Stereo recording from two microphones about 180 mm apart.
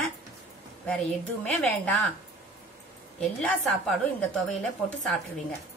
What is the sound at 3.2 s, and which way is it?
A woman's voice, 5° left (ahead or behind).